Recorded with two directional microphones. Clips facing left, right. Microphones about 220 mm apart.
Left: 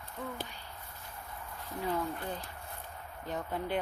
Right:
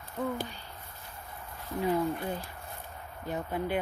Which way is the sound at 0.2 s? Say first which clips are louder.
Right 8 dB; 45° right (ahead or behind).